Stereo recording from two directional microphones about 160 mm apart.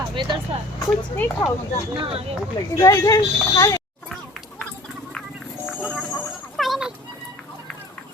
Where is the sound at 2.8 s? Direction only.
20° left (ahead or behind).